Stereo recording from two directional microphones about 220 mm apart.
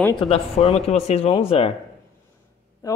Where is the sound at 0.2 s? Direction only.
25° left (ahead or behind).